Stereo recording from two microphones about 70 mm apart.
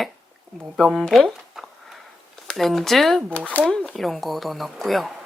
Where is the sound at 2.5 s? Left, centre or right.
Centre.